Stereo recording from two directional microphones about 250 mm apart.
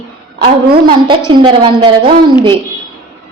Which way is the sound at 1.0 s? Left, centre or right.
Centre.